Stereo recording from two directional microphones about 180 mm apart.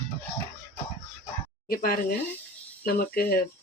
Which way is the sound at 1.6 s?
55° left (ahead or behind).